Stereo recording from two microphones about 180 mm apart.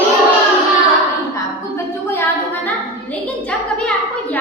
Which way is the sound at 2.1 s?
10° left (ahead or behind).